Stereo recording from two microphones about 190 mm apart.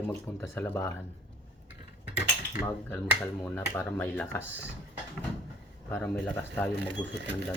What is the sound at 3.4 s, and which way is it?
Speech, 5° left (ahead or behind).